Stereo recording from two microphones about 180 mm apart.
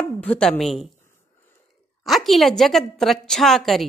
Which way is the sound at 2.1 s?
Centre (ahead or behind).